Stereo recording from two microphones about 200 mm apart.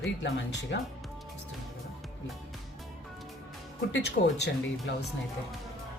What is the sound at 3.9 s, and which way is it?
Speech, 60° left (ahead or behind).